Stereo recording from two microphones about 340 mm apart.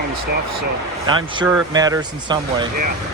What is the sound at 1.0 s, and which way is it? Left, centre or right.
Speech, centre.